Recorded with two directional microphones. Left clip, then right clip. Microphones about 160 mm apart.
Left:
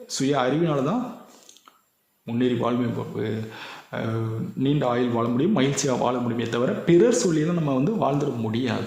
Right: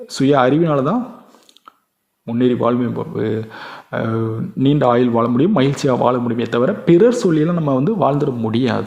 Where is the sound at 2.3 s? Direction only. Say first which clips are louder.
Right 8 dB; 35° right (ahead or behind).